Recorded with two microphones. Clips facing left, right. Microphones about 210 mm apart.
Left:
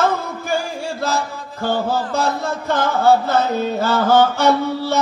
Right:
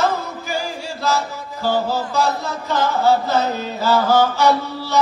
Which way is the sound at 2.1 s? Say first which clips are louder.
Even; 55° left (ahead or behind).